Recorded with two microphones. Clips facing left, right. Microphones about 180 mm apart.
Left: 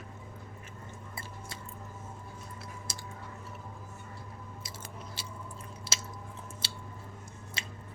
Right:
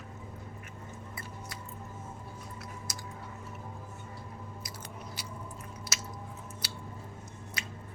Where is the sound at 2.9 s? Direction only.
25° left (ahead or behind).